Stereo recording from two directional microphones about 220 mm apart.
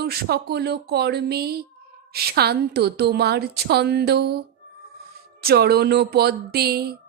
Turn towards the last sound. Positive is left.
turn(degrees=-45)  # may be behind; listen again after turning